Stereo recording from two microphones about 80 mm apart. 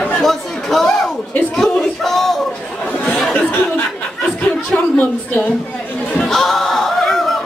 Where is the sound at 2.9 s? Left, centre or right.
Centre.